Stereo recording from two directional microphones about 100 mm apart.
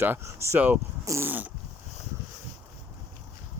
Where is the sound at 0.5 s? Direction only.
15° right (ahead or behind).